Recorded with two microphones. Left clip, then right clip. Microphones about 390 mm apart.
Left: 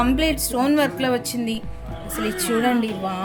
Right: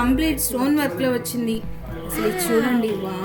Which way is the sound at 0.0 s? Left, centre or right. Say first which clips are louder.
Left 1 dB; left.